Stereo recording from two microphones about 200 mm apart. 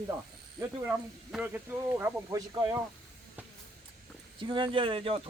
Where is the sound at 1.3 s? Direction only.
5° right (ahead or behind).